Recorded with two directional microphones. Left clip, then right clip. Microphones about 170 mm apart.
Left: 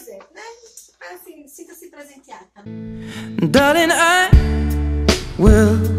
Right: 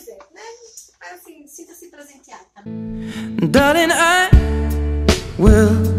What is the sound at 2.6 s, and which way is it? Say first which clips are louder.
Music: right 5 dB; centre (ahead or behind).